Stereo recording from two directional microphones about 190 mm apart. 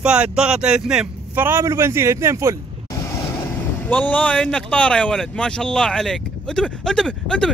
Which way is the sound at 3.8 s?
10° left (ahead or behind).